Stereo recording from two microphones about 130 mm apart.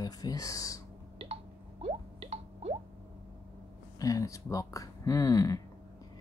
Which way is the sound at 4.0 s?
25° left (ahead or behind).